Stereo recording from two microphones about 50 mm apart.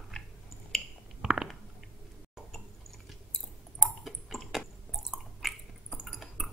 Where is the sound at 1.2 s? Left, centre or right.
Centre.